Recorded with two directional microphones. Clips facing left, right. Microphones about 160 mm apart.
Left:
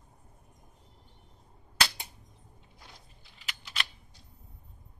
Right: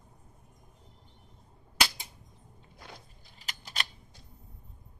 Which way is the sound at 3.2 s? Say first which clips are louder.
Left 1 dB; 40° right (ahead or behind).